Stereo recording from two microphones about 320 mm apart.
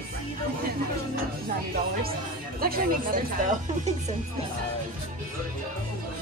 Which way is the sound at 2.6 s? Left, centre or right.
Right.